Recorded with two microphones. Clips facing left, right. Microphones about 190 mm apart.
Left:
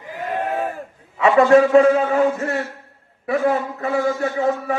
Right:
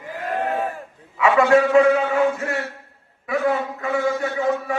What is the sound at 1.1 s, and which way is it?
A man's voice, 35° left (ahead or behind).